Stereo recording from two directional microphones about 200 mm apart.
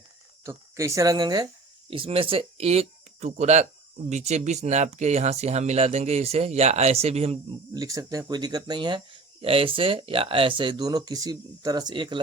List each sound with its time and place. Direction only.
0.4 s speech: 15° right (ahead or behind); by 7.3 s 30° right (ahead or behind)
7.7 s speech: 20° right (ahead or behind)